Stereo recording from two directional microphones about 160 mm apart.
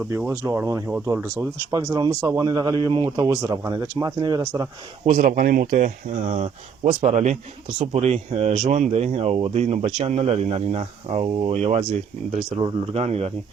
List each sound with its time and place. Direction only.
0.3 s a man's voice: 15° right (ahead or behind)
5.0 s speech: 55° right (ahead or behind)
12.5 s speech: 35° right (ahead or behind)